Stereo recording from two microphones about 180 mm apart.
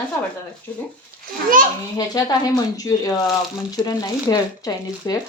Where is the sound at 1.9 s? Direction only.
20° left (ahead or behind).